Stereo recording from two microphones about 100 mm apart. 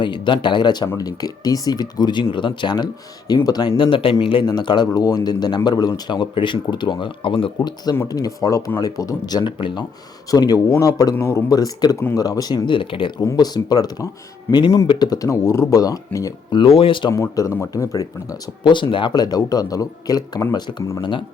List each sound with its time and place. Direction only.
0.0 s speech: 50° left (ahead or behind)
3.8 s speech: 60° left (ahead or behind)
4.4 s speech: 50° left (ahead or behind)
8.0 s speech: 40° left (ahead or behind); by 9.8 s 55° left (ahead or behind)
10.3 s speech: 40° left (ahead or behind); by 13.1 s 60° left (ahead or behind)
13.2 s speech: 40° left (ahead or behind)
14.5 s speech: 20° left (ahead or behind)
14.8 s speech: 40° left (ahead or behind)
16.5 s speech: 60° left (ahead or behind)
17.1 s speech: 35° left (ahead or behind)
18.6 s speech: 50° left (ahead or behind)